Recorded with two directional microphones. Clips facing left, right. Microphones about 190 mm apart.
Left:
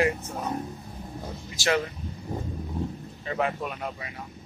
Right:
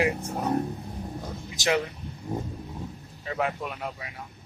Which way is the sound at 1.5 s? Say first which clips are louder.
Even; 20° right (ahead or behind).